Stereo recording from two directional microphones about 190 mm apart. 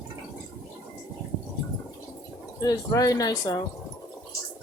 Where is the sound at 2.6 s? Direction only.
20° left (ahead or behind).